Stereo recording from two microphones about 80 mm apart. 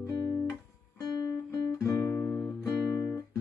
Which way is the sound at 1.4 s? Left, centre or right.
Left.